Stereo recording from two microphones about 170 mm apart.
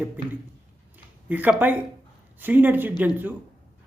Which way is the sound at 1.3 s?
10° right (ahead or behind).